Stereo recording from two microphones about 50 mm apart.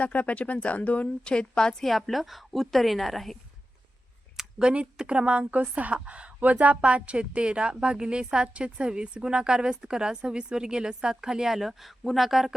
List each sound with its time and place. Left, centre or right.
0.0 s speech: left
1.8 s a woman's voice: centre
4.6 s a woman's voice: right; by 12.5 s centre